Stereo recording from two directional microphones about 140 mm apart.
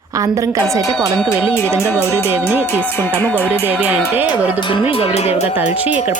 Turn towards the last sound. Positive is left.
turn(degrees=45)  # may be behind; listen again after turning